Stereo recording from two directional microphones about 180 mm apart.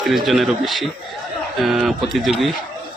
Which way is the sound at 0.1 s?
Centre (ahead or behind).